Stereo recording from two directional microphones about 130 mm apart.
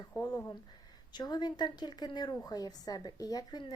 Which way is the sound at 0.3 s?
25° left (ahead or behind).